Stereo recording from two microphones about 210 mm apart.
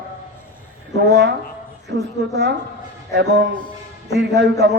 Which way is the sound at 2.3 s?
55° right (ahead or behind).